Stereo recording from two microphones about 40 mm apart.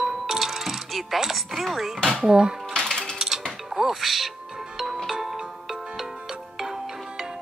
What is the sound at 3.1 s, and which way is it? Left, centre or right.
Mechanisms, centre.